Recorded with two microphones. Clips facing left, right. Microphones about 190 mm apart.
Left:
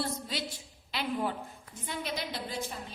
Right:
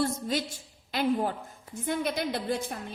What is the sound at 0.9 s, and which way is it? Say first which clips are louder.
A woman's voice: right 6 dB; 45° right (ahead or behind).